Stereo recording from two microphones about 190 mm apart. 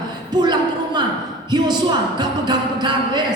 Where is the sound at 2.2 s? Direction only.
25° right (ahead or behind).